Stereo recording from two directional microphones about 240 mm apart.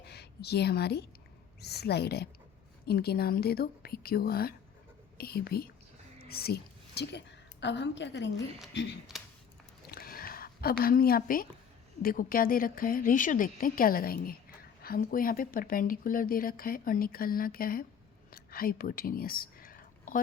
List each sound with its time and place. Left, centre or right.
0.0 s a woman's voice: left
9.9 s a sound: left
12.0 s speech: left
18.3 s whispering: left